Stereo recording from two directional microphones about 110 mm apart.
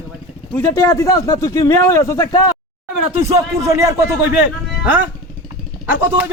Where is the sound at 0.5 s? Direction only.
25° left (ahead or behind).